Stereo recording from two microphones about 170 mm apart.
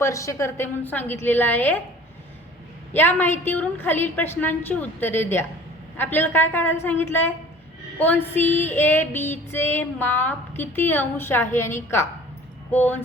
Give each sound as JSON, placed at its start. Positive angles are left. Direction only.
{"t": 0.0, "sound": "female singing", "side_deg": 20}
{"t": 2.9, "sound": "female singing", "side_deg": 10}
{"t": 7.9, "sound": "a sound", "side_deg": 10}
{"t": 8.4, "sound": "female singing", "side_deg": 10}
{"t": 12.7, "sound": "female singing", "side_deg": 10}